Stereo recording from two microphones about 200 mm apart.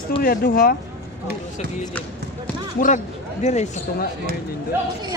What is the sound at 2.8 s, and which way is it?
Speech, 45° left (ahead or behind).